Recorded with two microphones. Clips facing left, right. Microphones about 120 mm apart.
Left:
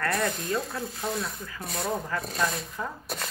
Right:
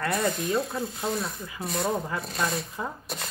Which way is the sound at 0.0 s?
15° right (ahead or behind).